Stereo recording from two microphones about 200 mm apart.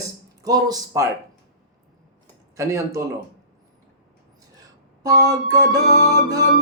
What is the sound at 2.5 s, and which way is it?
Speech, 15° right (ahead or behind).